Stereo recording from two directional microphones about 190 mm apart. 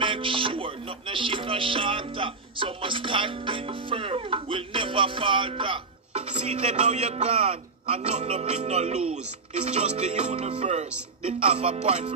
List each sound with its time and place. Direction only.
0.0 s music: 25° right (ahead or behind)